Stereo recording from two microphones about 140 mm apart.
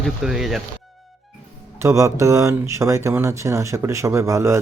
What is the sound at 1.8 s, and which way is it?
Speech, 20° right (ahead or behind).